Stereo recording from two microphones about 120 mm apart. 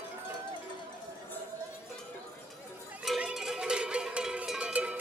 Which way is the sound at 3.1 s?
5° right (ahead or behind).